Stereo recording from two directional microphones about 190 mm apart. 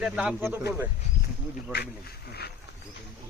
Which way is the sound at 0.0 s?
5° right (ahead or behind).